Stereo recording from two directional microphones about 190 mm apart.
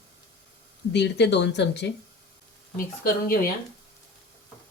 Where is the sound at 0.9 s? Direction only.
65° left (ahead or behind).